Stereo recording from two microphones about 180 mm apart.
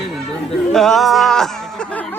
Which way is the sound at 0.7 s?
Centre (ahead or behind).